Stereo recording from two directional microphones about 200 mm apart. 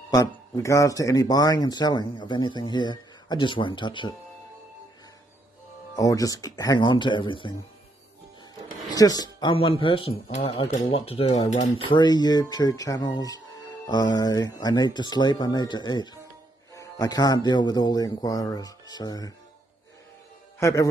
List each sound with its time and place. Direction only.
0.1 s speech: 15° left (ahead or behind)
5.9 s speech: 15° left (ahead or behind)
8.8 s speech: 20° left (ahead or behind)
20.5 s a man's voice: 15° left (ahead or behind)